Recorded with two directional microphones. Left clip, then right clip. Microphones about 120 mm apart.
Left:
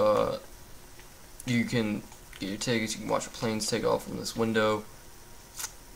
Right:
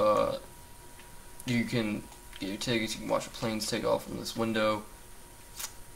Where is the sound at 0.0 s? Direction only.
40° left (ahead or behind).